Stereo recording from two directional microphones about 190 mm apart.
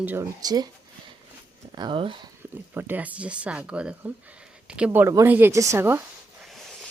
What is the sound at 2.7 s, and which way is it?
Speech, 10° right (ahead or behind).